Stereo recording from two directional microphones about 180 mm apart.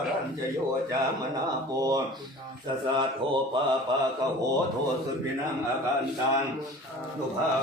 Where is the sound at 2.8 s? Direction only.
25° right (ahead or behind).